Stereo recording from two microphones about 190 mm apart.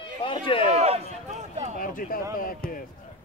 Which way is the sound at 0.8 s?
35° right (ahead or behind).